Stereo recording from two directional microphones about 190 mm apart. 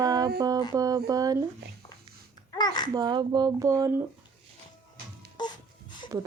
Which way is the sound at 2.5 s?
20° left (ahead or behind).